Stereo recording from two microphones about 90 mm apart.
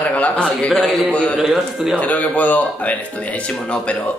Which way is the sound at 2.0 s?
15° left (ahead or behind).